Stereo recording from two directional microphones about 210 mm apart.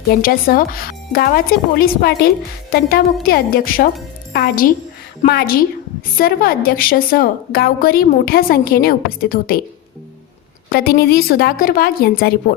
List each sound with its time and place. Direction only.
0.2 s a woman's voice: 45° left (ahead or behind)
3.2 s a woman's voice: 45° left (ahead or behind)
10.7 s a woman's voice: 45° left (ahead or behind)